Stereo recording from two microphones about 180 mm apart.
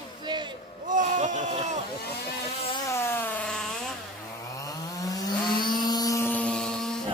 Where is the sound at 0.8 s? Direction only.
45° right (ahead or behind).